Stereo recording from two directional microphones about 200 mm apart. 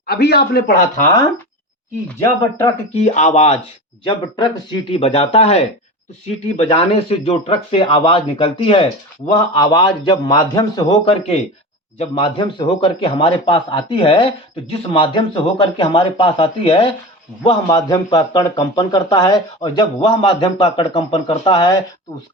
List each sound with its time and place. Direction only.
0.1 s a man's voice: 55° left (ahead or behind)
2.9 s speech: 35° left (ahead or behind)